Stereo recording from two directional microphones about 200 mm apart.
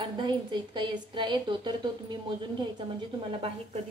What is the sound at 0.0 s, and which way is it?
A woman's voice, 25° right (ahead or behind).